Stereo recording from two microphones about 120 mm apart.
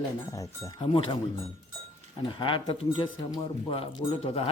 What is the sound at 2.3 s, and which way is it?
Speech, 45° left (ahead or behind).